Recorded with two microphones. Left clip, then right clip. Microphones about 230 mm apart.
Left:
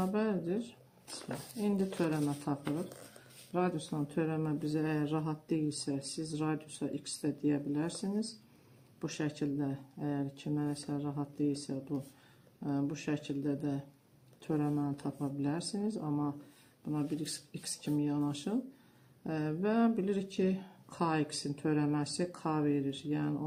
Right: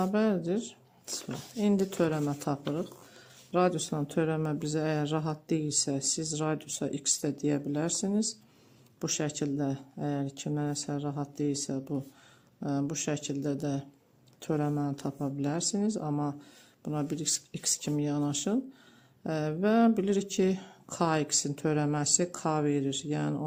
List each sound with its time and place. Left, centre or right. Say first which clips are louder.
0.0 s speech: right 5 dB; right